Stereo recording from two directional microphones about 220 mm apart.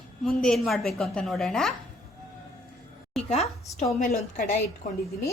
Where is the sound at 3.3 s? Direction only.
30° left (ahead or behind).